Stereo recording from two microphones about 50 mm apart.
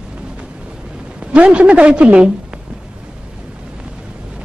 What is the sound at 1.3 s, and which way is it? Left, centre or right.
Speech, right.